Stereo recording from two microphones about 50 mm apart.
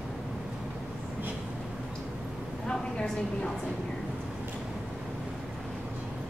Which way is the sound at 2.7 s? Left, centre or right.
Centre.